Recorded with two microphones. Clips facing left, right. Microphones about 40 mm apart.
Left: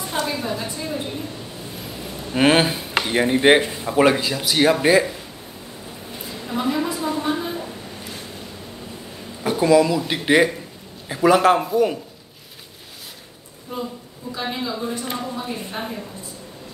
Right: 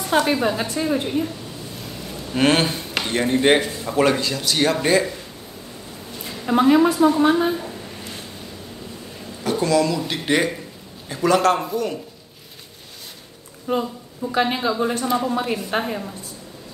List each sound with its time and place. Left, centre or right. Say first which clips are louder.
0.0 s a woman's voice: right 6 dB; right
2.3 s speech: left 2 dB; centre
6.2 s a sound: right 7 dB; right
6.9 s a woman's voice: right 7 dB; right
7.5 s a sound: right 1 dB; centre
9.4 s speech: left 3 dB; centre
13.7 s speech: right 8 dB; right
14.3 s a woman's voice: right 6 dB; right